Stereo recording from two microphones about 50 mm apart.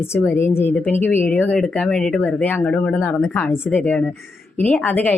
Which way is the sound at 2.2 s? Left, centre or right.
Left.